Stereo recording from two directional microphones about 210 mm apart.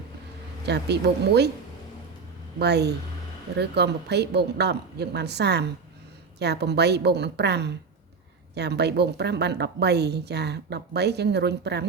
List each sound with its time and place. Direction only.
0.6 s a woman's voice: 50° right (ahead or behind)
2.6 s a woman's voice: 50° right (ahead or behind)